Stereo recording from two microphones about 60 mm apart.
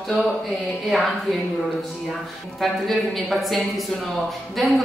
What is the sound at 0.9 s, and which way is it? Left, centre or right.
Speech, centre.